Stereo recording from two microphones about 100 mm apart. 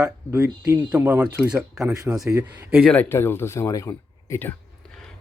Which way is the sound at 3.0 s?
25° left (ahead or behind).